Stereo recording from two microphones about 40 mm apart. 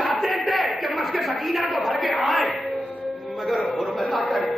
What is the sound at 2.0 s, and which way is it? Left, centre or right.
Battle cry, centre.